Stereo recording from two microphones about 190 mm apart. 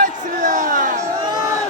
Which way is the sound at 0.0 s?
45° right (ahead or behind).